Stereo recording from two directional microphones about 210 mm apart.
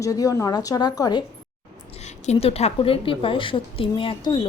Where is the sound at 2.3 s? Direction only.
30° left (ahead or behind).